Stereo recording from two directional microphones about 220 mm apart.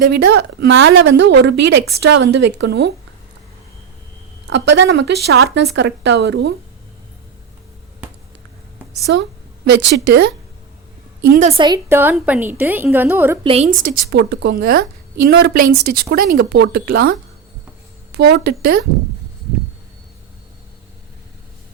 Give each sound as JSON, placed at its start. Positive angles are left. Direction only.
{"t": 0.1, "sound": "a woman's voice", "side_deg": -50}
{"t": 4.4, "sound": "a woman's voice", "side_deg": -55}
{"t": 9.1, "sound": "a woman's voice", "side_deg": -55}
{"t": 11.3, "sound": "a woman's voice", "side_deg": -30}
{"t": 11.9, "sound": "a woman's voice", "side_deg": -10}
{"t": 13.4, "sound": "a woman's voice", "side_deg": -25}
{"t": 13.7, "sound": "a woman's voice", "side_deg": -45}